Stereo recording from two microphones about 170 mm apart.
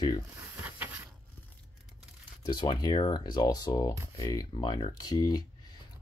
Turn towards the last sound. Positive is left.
turn(degrees=25)  # may be behind; listen again after turning